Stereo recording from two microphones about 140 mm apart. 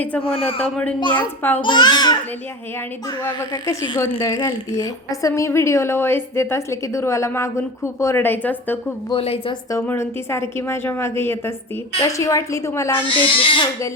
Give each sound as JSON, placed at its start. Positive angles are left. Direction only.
{"t": 0.2, "sound": "speech", "side_deg": 40}
{"t": 1.4, "sound": "a woman's voice", "side_deg": 15}
{"t": 1.6, "sound": "speech", "side_deg": 30}
{"t": 3.5, "sound": "a woman's voice", "side_deg": 20}
{"t": 9.0, "sound": "speech", "side_deg": 40}
{"t": 9.7, "sound": "a woman's voice", "side_deg": 15}
{"t": 13.1, "sound": "speech", "side_deg": 35}